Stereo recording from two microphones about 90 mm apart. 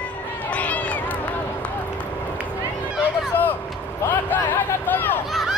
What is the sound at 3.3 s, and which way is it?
Vehicle, 25° left (ahead or behind).